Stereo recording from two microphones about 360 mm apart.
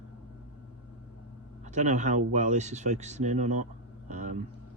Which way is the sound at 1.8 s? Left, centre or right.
Centre.